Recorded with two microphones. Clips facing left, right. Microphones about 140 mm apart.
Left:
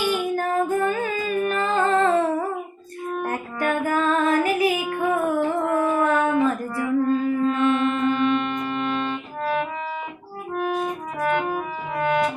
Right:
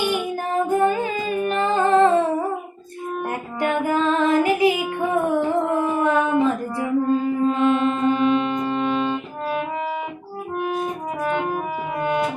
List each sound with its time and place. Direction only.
0.1 s female singing: 20° right (ahead or behind)
3.2 s music: 20° right (ahead or behind)
11.3 s music: 30° right (ahead or behind)